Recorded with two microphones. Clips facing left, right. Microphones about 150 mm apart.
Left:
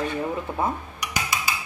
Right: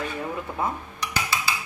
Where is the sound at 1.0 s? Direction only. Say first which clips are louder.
Right 2 dB; 15° left (ahead or behind).